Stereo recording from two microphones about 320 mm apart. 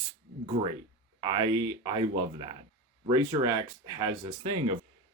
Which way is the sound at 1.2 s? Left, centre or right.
Centre.